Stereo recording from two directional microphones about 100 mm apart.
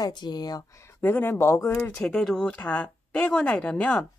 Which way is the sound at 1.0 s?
20° left (ahead or behind).